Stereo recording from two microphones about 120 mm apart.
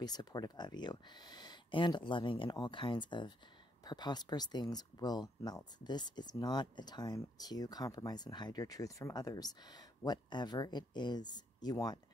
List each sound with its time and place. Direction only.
0.0 s speech: 35° left (ahead or behind)